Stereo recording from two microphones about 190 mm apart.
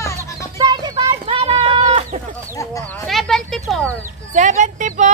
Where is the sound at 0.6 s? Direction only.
20° right (ahead or behind).